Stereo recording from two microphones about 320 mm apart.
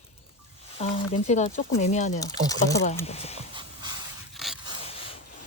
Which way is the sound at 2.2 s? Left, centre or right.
Centre.